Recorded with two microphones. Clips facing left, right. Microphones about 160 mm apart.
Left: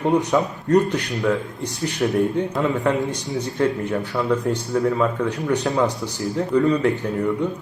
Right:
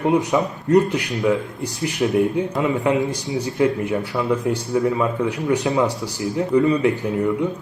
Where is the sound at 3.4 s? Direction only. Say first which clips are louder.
Right 2 dB; 10° right (ahead or behind).